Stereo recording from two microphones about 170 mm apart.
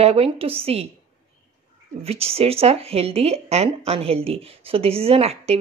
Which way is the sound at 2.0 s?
35° right (ahead or behind).